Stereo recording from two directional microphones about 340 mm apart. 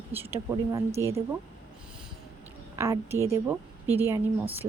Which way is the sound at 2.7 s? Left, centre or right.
Centre.